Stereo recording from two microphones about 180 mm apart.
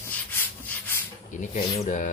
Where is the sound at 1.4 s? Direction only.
40° left (ahead or behind).